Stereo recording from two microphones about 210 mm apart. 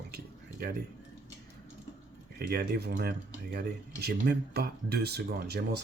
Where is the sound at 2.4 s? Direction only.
50° right (ahead or behind).